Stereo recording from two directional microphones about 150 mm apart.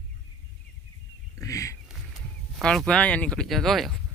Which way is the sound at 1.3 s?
20° left (ahead or behind).